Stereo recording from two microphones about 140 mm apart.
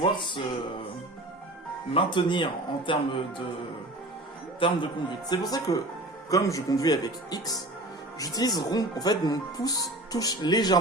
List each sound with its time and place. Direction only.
0.0 s speech: 35° left (ahead or behind)
1.9 s speech: 35° left (ahead or behind)
4.6 s speech: 35° left (ahead or behind)